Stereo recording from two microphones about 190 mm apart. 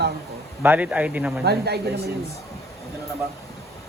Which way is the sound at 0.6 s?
10° right (ahead or behind).